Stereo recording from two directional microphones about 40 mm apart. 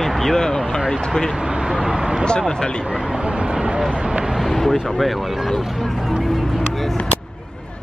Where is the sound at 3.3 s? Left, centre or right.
Right.